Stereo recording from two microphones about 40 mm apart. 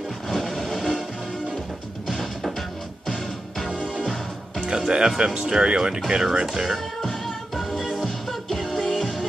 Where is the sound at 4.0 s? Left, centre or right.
Centre.